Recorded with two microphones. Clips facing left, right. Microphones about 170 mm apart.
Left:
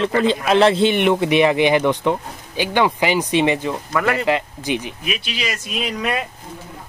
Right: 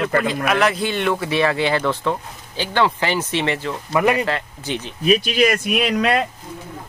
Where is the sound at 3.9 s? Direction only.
20° right (ahead or behind).